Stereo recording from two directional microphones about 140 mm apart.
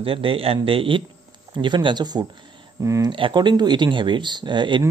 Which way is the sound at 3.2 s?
35° right (ahead or behind).